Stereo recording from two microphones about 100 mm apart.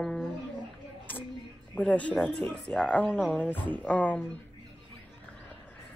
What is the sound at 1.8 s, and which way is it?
Speech, 15° left (ahead or behind).